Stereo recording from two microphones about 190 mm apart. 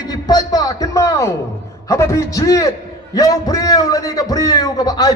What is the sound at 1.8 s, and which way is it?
A man's voice, 15° left (ahead or behind).